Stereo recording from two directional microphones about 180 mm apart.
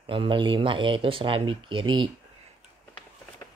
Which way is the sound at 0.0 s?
30° right (ahead or behind).